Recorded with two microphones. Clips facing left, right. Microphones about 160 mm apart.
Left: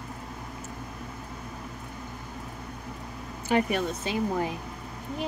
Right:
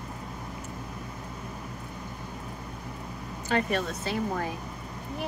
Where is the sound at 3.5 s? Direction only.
15° left (ahead or behind).